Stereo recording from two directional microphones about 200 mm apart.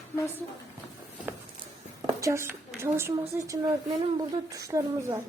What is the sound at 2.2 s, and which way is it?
A woman's voice, 15° right (ahead or behind).